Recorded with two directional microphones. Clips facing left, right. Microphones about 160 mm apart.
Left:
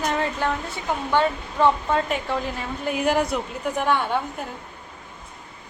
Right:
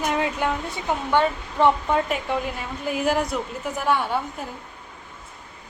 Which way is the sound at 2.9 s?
Centre (ahead or behind).